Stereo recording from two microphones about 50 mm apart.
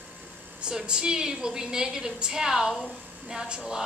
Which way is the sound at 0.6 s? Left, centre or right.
Centre.